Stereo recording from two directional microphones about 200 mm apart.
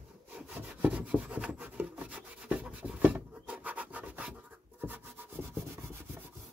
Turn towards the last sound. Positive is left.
turn(degrees=-10)  # may be behind; listen again after turning